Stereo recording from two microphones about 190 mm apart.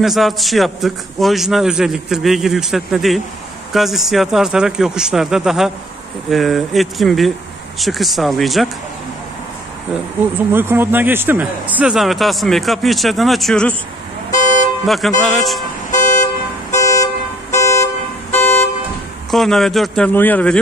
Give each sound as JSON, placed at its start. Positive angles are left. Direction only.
{"t": 0.0, "sound": "a man's voice", "side_deg": 0}
{"t": 10.5, "sound": "a man's voice", "side_deg": -10}
{"t": 14.9, "sound": "a man's voice", "side_deg": 0}
{"t": 15.9, "sound": "toot", "side_deg": 40}
{"t": 16.7, "sound": "car", "side_deg": 15}
{"t": 19.3, "sound": "a man's voice", "side_deg": 0}